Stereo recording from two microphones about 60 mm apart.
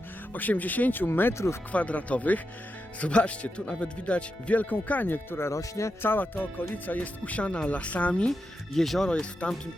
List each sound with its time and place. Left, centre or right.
0.3 s speech: left
1.3 s speech: left
1.7 s speech: left
5.5 s speech: left
6.0 s speech: left
8.3 s speech: centre